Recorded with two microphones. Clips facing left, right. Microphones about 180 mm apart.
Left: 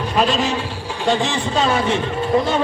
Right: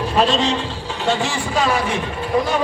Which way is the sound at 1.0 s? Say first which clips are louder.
Left 2 dB; 20° left (ahead or behind).